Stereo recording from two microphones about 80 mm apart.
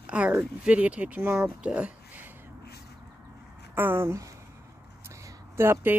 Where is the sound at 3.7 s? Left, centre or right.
Right.